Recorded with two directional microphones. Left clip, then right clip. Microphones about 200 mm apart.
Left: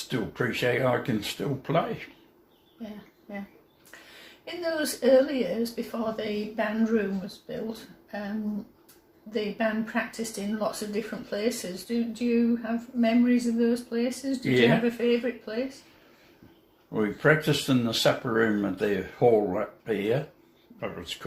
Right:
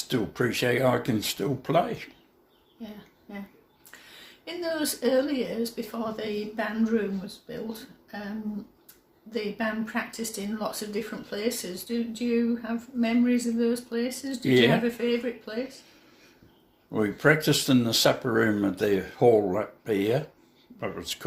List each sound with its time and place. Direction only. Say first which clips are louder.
0.1 s speech: right 2 dB; 50° right (ahead or behind)
3.3 s speech: left 3 dB; 20° right (ahead or behind)
4.4 s speech: even; 20° right (ahead or behind)
9.3 s speech: left 2 dB; 20° right (ahead or behind)
16.9 s speech: right 1 dB; 50° right (ahead or behind)